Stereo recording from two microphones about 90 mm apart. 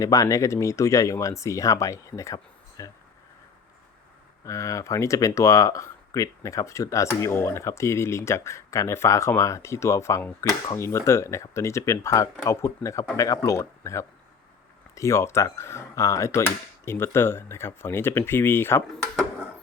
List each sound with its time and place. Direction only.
0.0 s speech: 40° left (ahead or behind)
4.4 s speech: 35° left (ahead or behind)